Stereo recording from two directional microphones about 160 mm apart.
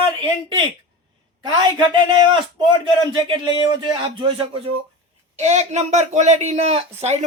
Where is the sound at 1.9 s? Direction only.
30° right (ahead or behind).